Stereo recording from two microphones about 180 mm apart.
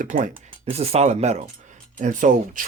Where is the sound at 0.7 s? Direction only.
35° right (ahead or behind).